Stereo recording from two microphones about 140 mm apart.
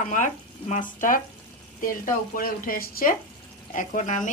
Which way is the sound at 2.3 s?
90° left.